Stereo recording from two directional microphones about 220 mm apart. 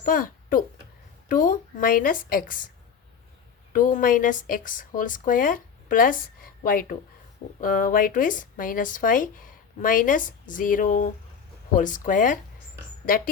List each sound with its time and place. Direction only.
0.0 s speech: 40° left (ahead or behind)
3.7 s speech: 35° left (ahead or behind)